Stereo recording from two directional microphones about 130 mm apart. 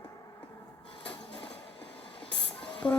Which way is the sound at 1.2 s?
40° left (ahead or behind).